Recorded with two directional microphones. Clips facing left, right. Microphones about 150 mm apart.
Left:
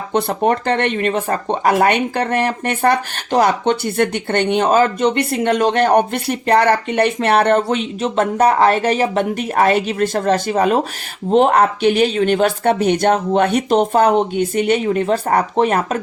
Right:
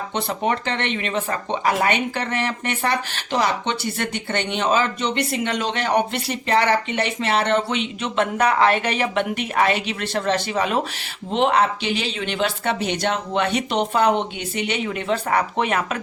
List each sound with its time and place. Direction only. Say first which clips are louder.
0.1 s speech: left 8 dB; 50° left (ahead or behind)